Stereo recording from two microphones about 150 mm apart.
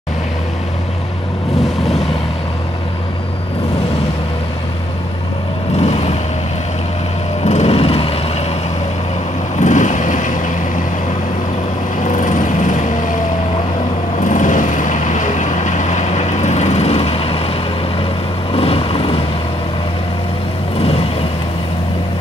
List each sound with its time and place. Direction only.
5.8 s vehicle: 45° left (ahead or behind)
7.4 s vehicle: 45° left (ahead or behind)
9.6 s vehicle: 55° left (ahead or behind)
12.0 s vehicle: 60° left (ahead or behind)
14.2 s vehicle: 60° left (ahead or behind); by 17.5 s 40° left (ahead or behind)
18.5 s vehicle: 40° left (ahead or behind)